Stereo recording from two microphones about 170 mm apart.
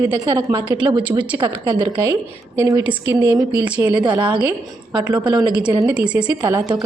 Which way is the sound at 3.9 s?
30° right (ahead or behind).